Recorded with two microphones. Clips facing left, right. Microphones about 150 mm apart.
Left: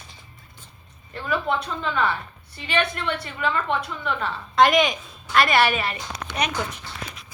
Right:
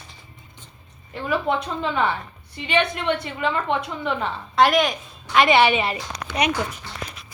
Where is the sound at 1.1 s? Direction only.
15° right (ahead or behind).